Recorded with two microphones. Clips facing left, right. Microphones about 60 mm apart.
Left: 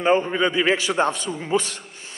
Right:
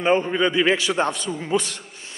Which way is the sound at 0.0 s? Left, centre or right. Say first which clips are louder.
Even; left.